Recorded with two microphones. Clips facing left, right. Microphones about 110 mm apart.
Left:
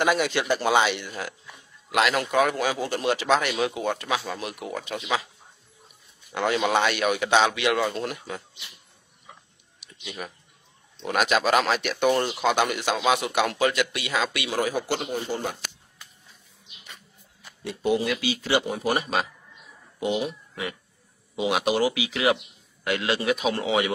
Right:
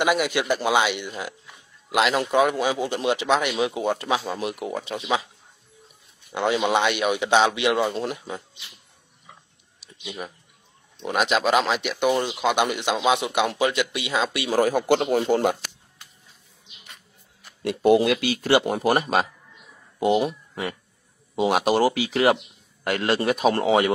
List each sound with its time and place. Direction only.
0.0 s speech: 10° right (ahead or behind)
3.7 s speech: 25° right (ahead or behind)
6.3 s speech: 20° right (ahead or behind)
10.0 s speech: 20° right (ahead or behind)
14.6 s speech: 50° right (ahead or behind)
17.6 s speech: 65° right (ahead or behind); by 23.9 s 45° right (ahead or behind)